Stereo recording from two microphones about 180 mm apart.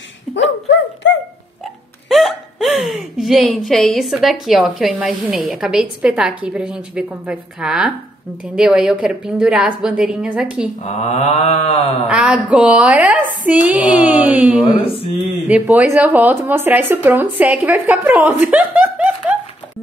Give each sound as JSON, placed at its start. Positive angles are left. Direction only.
{"t": 0.3, "sound": "dog", "side_deg": 80}
{"t": 2.0, "sound": "a woman's voice", "side_deg": 0}
{"t": 10.8, "sound": "mantra", "side_deg": 40}
{"t": 12.1, "sound": "speech", "side_deg": -5}
{"t": 14.6, "sound": "mantra", "side_deg": 30}
{"t": 15.4, "sound": "speech", "side_deg": -10}